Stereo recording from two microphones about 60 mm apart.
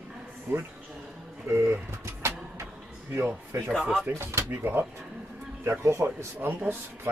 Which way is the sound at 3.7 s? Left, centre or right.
Centre.